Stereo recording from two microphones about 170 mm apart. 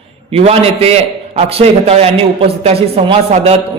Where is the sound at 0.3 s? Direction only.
35° right (ahead or behind).